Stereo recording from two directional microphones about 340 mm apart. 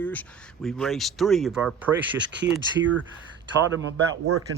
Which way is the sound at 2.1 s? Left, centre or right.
Right.